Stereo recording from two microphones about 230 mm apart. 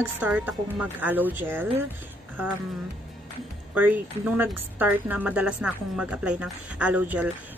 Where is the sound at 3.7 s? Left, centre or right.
Centre.